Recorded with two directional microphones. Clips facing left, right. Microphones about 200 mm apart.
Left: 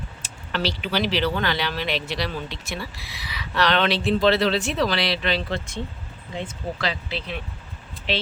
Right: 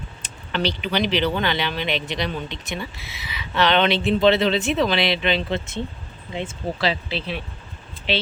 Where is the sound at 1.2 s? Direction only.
20° right (ahead or behind).